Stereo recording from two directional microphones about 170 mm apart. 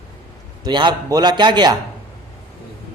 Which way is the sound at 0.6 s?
25° right (ahead or behind).